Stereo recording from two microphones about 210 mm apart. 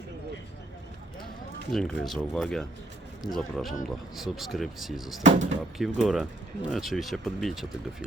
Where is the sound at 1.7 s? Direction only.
5° left (ahead or behind).